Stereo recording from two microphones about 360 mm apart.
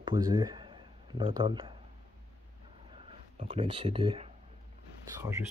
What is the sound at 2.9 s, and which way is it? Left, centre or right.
Speech, centre.